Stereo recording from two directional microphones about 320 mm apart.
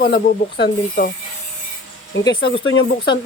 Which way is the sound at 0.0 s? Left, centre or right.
Left.